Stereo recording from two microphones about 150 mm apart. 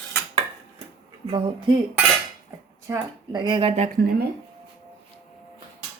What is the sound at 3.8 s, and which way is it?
Speech, 75° right (ahead or behind).